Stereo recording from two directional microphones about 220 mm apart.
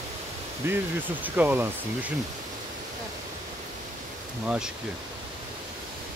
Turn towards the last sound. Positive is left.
turn(degrees=-5)  # may be behind; listen again after turning